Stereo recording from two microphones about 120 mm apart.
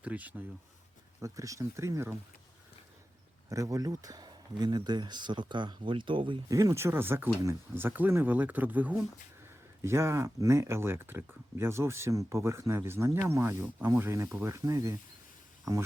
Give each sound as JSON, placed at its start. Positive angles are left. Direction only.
{"t": 0.0, "sound": "speech", "side_deg": -10}
{"t": 1.2, "sound": "speech", "side_deg": -25}
{"t": 3.5, "sound": "speech", "side_deg": -30}
{"t": 6.5, "sound": "speech", "side_deg": -30}